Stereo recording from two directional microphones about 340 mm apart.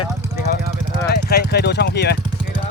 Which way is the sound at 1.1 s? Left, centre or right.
Left.